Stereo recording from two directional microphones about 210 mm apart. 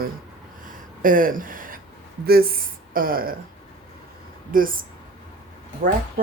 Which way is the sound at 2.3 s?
45° right (ahead or behind).